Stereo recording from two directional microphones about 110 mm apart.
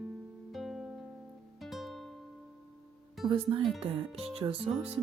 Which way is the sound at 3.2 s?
50° right (ahead or behind).